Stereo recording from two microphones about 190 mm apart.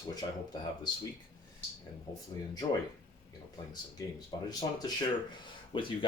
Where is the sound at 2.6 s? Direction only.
25° left (ahead or behind).